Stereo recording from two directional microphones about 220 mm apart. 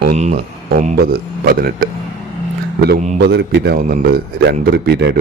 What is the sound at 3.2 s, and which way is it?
Speech, 50° right (ahead or behind).